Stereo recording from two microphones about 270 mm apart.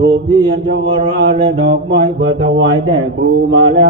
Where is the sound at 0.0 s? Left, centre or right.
Centre.